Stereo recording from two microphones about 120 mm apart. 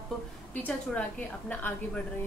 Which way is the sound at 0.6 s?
15° left (ahead or behind).